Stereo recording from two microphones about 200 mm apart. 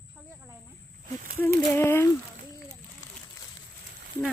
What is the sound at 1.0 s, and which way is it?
Speech, 45° right (ahead or behind).